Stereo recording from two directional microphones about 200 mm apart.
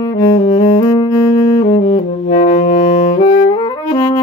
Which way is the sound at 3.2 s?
45° left (ahead or behind).